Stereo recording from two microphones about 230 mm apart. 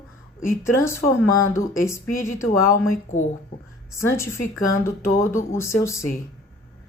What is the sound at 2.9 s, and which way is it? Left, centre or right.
Speech, left.